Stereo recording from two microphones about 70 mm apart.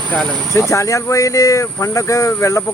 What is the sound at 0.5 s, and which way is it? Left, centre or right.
Speech, left.